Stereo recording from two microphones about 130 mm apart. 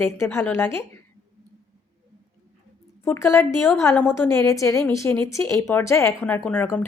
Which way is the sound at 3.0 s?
20° left (ahead or behind).